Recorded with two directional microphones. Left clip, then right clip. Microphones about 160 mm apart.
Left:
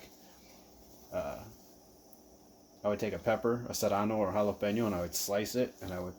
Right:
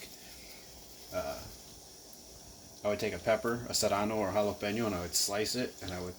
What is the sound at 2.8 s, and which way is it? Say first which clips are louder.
Speech: even; 55° left (ahead or behind).